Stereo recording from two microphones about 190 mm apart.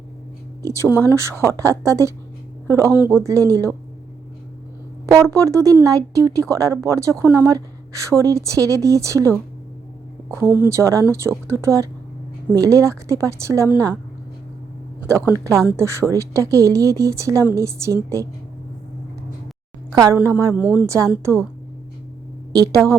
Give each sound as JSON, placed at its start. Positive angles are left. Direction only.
{"t": 0.6, "sound": "speech", "side_deg": -15}
{"t": 5.0, "sound": "speech", "side_deg": -15}
{"t": 10.3, "sound": "speech", "side_deg": -10}
{"t": 15.0, "sound": "speech", "side_deg": -15}
{"t": 20.1, "sound": "speech", "side_deg": -10}
{"t": 22.5, "sound": "a woman's voice", "side_deg": -20}